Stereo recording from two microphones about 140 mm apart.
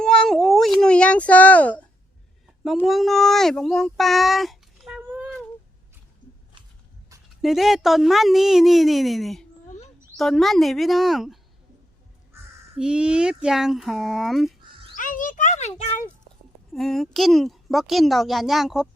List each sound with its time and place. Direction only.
0.0 s cat: 5° left (ahead or behind)
2.8 s speech: centre (ahead or behind)
7.4 s a woman's voice: centre (ahead or behind)
12.7 s a woman's voice: 5° right (ahead or behind)
14.9 s a sound: 70° left (ahead or behind)
16.7 s a woman's voice: centre (ahead or behind)